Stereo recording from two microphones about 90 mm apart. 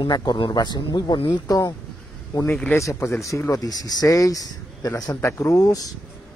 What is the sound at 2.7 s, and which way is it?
A man's voice, 35° left (ahead or behind).